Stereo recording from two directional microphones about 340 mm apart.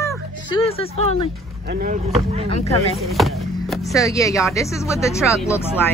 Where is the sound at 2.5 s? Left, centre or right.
Centre.